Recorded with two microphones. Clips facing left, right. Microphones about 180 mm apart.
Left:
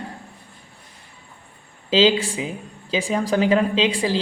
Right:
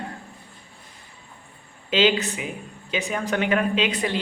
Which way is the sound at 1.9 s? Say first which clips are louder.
Left 3 dB; 30° left (ahead or behind).